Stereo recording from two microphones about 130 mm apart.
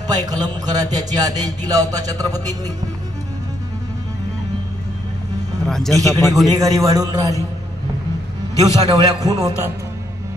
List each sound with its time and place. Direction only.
0.0 s a man's voice: 30° right (ahead or behind)
5.7 s speech: 5° left (ahead or behind)
5.9 s a man's voice: 25° right (ahead or behind)
8.5 s a man's voice: 30° right (ahead or behind)